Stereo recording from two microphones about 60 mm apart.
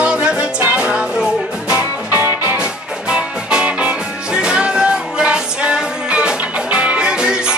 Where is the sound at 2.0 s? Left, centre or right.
Right.